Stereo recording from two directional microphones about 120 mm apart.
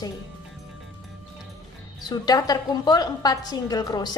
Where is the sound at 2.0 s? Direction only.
35° left (ahead or behind).